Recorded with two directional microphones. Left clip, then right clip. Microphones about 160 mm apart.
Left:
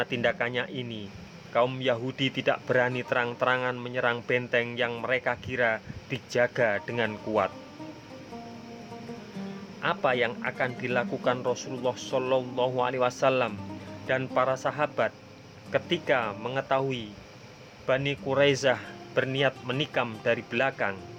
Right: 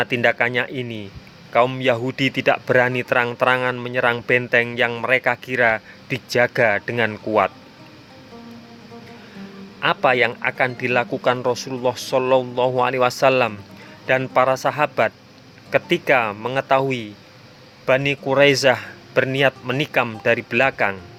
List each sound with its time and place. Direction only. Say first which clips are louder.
0.0 s speech: right 9 dB; 35° right (ahead or behind)
9.8 s speech: right 9 dB; 35° right (ahead or behind)